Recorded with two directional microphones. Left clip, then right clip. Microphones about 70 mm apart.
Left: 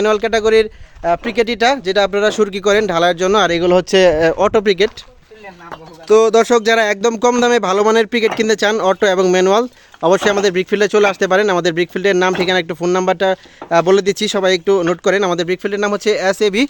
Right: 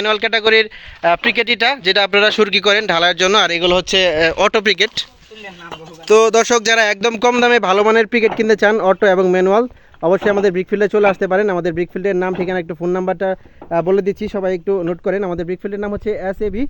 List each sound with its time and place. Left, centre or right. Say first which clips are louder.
0.0 s speech: left 1 dB; left
1.0 s speech: right 2 dB; centre; by 3.5 s left
4.2 s speech: even; left
4.6 s speech: left 1 dB; left
6.1 s speech: left 1 dB; centre
7.0 s speech: even; left
12.8 s speech: left 2 dB; left
13.7 s speech: left 3 dB; left
14.4 s speech: left 4 dB; left
15.4 s speech: left 5 dB; left